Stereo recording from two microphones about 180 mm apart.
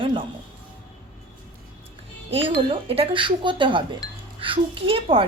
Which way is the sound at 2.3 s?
30° right (ahead or behind).